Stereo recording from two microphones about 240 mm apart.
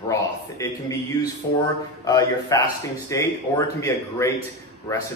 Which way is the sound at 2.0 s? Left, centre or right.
Centre.